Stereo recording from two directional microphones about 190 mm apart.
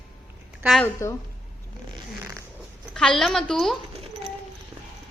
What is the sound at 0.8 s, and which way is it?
Speech, 15° left (ahead or behind).